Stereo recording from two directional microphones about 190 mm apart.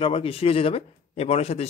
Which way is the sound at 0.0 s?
30° left (ahead or behind).